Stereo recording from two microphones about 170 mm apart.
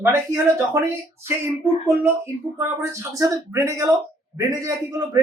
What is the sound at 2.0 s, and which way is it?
A man's voice, 15° right (ahead or behind).